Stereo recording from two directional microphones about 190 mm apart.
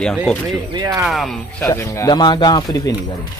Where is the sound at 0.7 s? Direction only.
20° right (ahead or behind).